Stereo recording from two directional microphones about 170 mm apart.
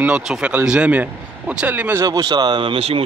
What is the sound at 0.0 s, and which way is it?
Speech, 5° right (ahead or behind).